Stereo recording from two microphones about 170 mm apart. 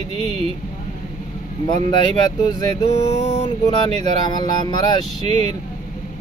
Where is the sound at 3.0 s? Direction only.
40° left (ahead or behind).